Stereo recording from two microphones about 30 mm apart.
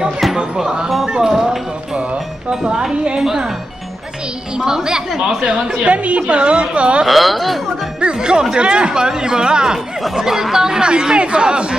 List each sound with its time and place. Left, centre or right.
0.4 s speech: right
1.2 s a sound: centre
2.6 s speech: right
4.6 s speech: right
5.9 s a woman's voice: right
7.1 s speech: centre
8.0 s music: right
8.5 s speech: right
10.1 s speech: centre
10.8 s speech: right